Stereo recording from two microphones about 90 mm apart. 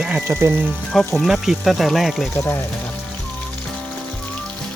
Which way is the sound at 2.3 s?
25° left (ahead or behind).